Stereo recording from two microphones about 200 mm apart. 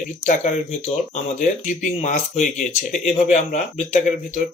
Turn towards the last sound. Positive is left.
turn(degrees=35)  # may be behind; listen again after turning